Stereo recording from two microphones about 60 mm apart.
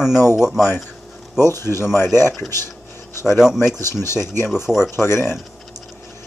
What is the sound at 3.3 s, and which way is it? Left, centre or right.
Speech, centre.